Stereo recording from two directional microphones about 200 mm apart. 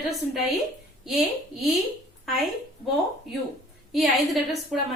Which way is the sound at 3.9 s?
Centre (ahead or behind).